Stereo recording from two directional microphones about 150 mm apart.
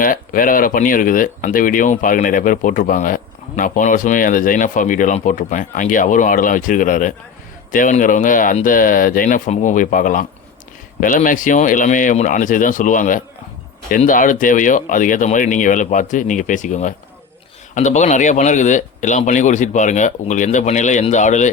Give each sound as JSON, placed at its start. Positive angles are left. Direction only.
{"t": 0.0, "sound": "speech", "side_deg": 65}